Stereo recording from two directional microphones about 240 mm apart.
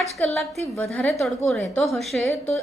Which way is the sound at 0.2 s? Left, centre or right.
Centre.